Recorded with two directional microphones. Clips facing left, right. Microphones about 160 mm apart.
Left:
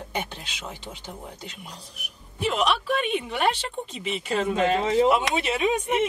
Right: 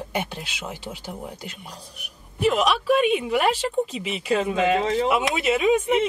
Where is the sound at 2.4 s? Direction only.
5° right (ahead or behind).